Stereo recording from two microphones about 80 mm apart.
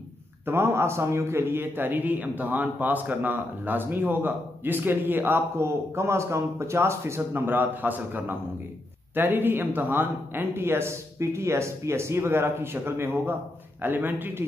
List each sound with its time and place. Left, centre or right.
0.5 s a man's voice: right